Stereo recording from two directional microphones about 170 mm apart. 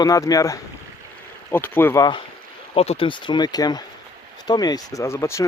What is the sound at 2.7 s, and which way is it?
Speech, 35° left (ahead or behind).